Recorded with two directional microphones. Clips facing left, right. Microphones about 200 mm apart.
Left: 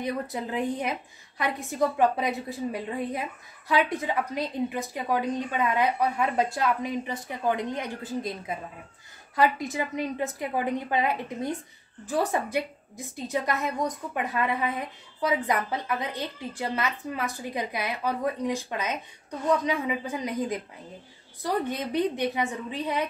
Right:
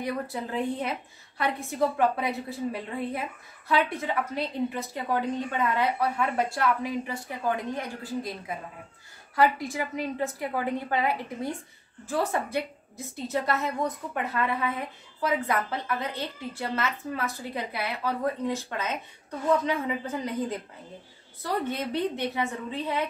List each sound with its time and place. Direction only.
0.0 s a woman's voice: 15° left (ahead or behind)
9.3 s a woman's voice: 20° left (ahead or behind)